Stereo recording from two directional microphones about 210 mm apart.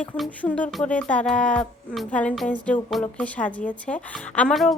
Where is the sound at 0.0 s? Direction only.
5° left (ahead or behind).